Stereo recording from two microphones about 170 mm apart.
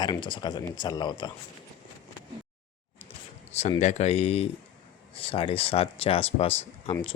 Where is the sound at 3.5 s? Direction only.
40° left (ahead or behind).